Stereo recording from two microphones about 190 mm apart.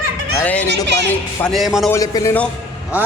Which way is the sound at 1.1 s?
Centre (ahead or behind).